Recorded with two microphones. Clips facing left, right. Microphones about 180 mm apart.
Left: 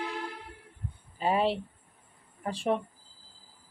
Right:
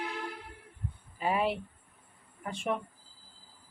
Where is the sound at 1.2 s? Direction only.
30° left (ahead or behind).